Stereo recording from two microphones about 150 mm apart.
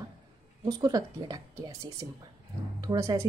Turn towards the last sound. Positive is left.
turn(degrees=-25)  # may be behind; listen again after turning